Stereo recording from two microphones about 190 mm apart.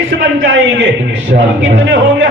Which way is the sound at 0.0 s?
90° right.